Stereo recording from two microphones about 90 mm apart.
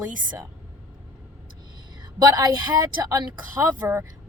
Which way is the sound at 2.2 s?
50° right (ahead or behind).